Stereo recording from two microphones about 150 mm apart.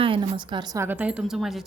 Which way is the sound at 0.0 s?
35° right (ahead or behind).